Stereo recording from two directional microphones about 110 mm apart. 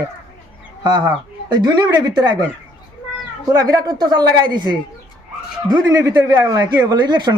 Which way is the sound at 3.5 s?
35° right (ahead or behind).